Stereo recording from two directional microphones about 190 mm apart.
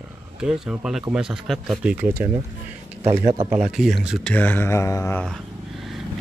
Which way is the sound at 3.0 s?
35° right (ahead or behind).